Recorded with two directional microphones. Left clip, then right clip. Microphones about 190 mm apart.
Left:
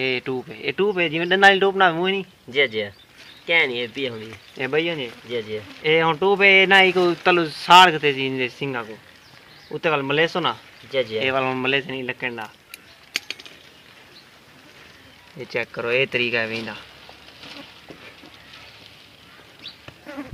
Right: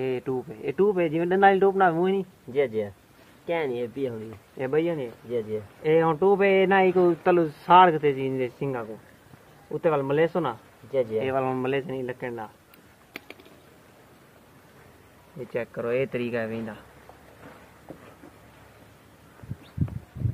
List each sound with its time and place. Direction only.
0.0 s speech: 20° left (ahead or behind)
2.5 s speech: 5° right (ahead or behind)
4.6 s speech: 20° left (ahead or behind)
10.9 s speech: centre (ahead or behind)
11.1 s speech: 20° left (ahead or behind)
15.5 s speech: 25° left (ahead or behind)